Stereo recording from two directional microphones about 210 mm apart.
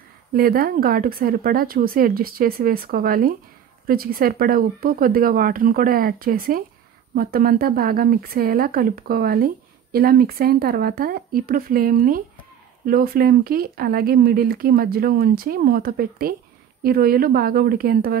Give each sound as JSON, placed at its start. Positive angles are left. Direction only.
{"t": 0.3, "sound": "speech", "side_deg": -45}